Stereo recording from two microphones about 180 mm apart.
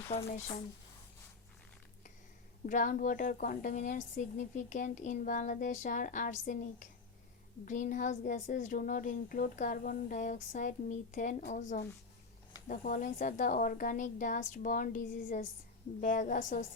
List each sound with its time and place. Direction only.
0.1 s speech: 35° left (ahead or behind)
2.6 s a woman's voice: 45° left (ahead or behind)
12.6 s a woman's voice: 45° left (ahead or behind)